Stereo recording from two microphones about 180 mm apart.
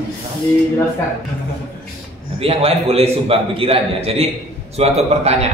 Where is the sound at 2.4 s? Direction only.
30° right (ahead or behind).